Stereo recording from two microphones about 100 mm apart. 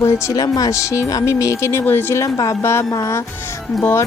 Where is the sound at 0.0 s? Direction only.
30° left (ahead or behind).